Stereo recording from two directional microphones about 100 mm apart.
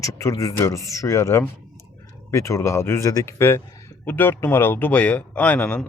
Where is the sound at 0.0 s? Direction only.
30° left (ahead or behind).